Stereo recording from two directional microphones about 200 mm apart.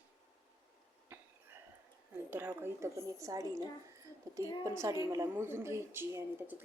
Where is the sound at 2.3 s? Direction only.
10° right (ahead or behind).